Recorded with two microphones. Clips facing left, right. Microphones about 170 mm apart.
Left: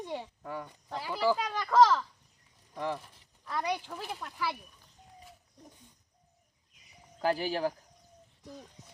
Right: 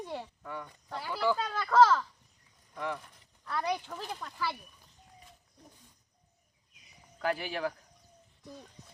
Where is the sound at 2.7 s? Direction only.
30° left (ahead or behind).